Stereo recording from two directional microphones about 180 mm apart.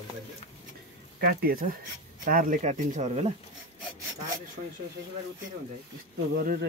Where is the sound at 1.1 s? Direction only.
55° right (ahead or behind); by 3.3 s 35° right (ahead or behind).